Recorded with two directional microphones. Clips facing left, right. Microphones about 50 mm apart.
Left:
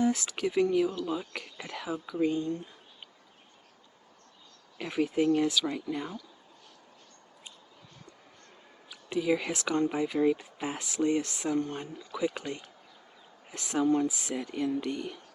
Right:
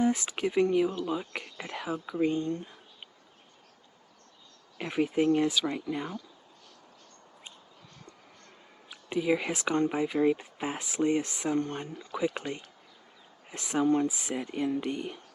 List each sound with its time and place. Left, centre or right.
0.0 s speech: right
2.3 s speech: right
4.8 s speech: centre
8.9 s speech: centre
10.3 s speech: right
12.4 s speech: centre
13.5 s speech: right